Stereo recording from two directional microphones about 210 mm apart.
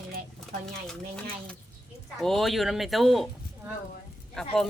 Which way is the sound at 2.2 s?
Centre (ahead or behind).